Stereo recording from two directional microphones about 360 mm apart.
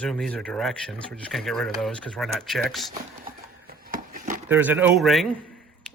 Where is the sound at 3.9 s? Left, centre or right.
Right.